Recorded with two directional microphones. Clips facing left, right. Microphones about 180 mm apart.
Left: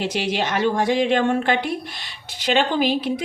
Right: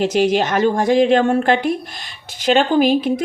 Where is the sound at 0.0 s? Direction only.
45° right (ahead or behind).